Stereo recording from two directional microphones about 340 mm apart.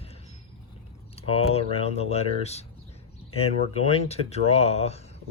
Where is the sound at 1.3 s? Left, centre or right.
Centre.